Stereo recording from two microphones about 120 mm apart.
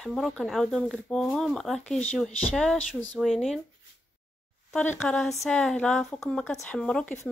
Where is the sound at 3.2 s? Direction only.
Centre (ahead or behind).